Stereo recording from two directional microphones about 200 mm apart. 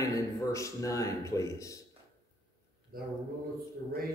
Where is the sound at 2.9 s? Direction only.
45° right (ahead or behind).